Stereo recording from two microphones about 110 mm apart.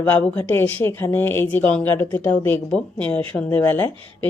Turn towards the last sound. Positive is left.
turn(degrees=15)  # may be behind; listen again after turning